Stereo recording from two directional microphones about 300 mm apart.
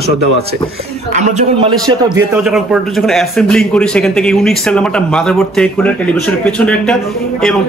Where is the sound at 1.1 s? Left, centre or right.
Right.